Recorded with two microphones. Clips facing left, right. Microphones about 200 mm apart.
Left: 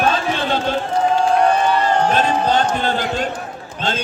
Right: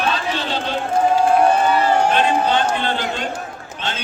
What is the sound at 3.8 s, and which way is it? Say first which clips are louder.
Run: left 5 dB; 45° left (ahead or behind).